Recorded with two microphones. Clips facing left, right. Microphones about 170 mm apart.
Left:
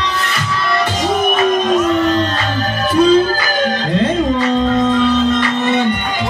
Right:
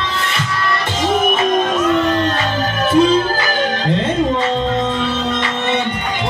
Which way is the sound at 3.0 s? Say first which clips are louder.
Left 2 dB; 25° right (ahead or behind).